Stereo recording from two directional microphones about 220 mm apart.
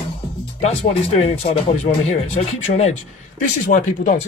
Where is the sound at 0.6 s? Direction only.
25° left (ahead or behind).